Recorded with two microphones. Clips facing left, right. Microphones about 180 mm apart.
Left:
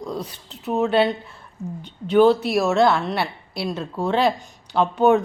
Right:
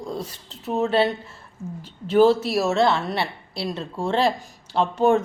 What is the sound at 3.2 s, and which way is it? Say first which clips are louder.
Speech: left 1 dB; 30° right (ahead or behind).